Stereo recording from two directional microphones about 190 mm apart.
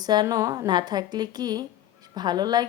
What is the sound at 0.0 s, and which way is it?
Speech, 20° right (ahead or behind).